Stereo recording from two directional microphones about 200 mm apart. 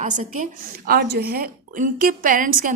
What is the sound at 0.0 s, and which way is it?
A woman's voice, 40° right (ahead or behind).